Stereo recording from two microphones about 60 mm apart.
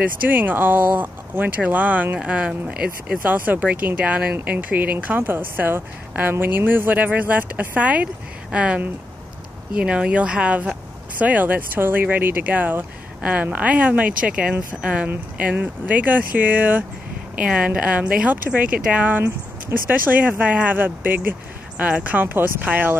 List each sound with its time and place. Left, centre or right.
0.0 s speech: right; by 3.2 s centre
3.3 s speech: right
17.5 s speech: centre